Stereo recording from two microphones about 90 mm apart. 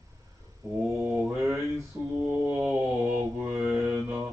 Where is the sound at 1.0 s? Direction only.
10° right (ahead or behind).